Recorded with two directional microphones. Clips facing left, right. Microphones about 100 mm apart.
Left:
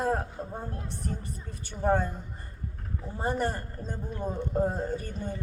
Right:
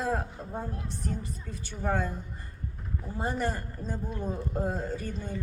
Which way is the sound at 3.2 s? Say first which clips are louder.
Left 2 dB; 45° left (ahead or behind).